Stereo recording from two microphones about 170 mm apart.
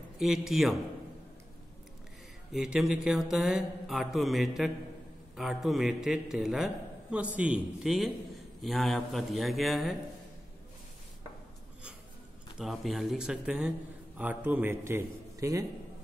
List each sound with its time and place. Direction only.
0.2 s a man's voice: centre (ahead or behind)
2.5 s a man's voice: 5° right (ahead or behind)
12.5 s a man's voice: centre (ahead or behind); by 15.6 s 20° right (ahead or behind)